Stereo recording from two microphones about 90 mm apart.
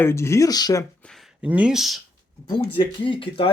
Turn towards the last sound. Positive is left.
turn(degrees=80)